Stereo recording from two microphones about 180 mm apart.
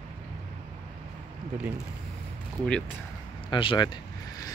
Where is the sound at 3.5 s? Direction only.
25° left (ahead or behind).